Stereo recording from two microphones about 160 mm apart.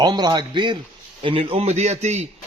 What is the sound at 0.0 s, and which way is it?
A man's voice, 25° right (ahead or behind).